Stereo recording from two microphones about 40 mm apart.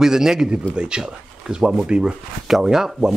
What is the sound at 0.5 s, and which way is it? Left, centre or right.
Speech, right.